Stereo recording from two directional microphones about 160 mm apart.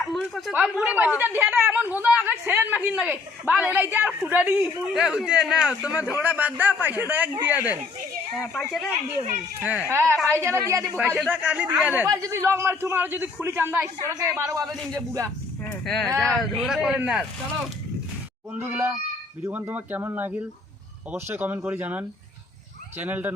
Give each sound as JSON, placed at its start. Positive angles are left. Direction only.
{"t": 0.0, "sound": "chatter", "side_deg": 0}
{"t": 0.5, "sound": "speech", "side_deg": -5}
{"t": 8.4, "sound": "a man's voice", "side_deg": 0}
{"t": 9.6, "sound": "speech", "side_deg": -10}
{"t": 10.9, "sound": "speech", "side_deg": -5}
{"t": 12.0, "sound": "speech", "side_deg": -20}
{"t": 16.2, "sound": "a man's voice", "side_deg": 0}
{"t": 18.7, "sound": "speech", "side_deg": -15}